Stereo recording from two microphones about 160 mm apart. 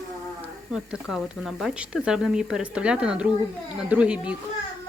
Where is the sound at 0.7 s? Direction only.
5° right (ahead or behind).